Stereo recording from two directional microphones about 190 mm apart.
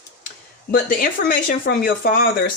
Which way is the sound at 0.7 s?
50° left (ahead or behind).